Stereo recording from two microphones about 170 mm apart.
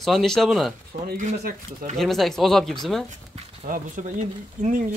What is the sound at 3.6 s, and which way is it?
Speech, 50° right (ahead or behind).